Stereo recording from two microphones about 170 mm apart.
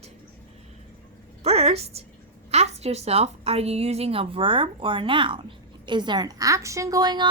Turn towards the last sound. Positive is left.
turn(degrees=-25)  # may be behind; listen again after turning